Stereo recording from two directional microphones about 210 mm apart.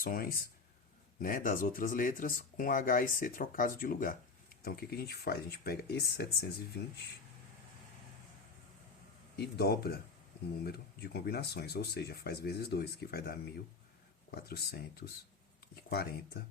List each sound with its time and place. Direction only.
0.0 s speech: 45° left (ahead or behind)
9.3 s speech: 50° left (ahead or behind)